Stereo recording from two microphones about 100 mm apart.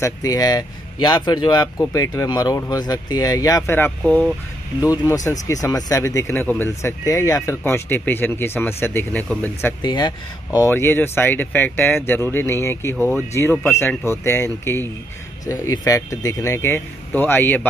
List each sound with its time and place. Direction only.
0.0 s speech: 40° left (ahead or behind)
3.6 s speech: 20° left (ahead or behind)
4.7 s speech: 45° left (ahead or behind); by 7.0 s 25° left (ahead or behind)
7.1 s speech: 35° left (ahead or behind)
7.6 s speech: 20° left (ahead or behind)
9.8 s speech: 45° left (ahead or behind)
10.7 s speech: 20° left (ahead or behind)